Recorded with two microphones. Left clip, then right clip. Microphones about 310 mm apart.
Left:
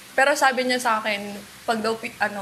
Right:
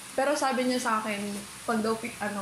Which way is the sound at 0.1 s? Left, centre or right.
Left.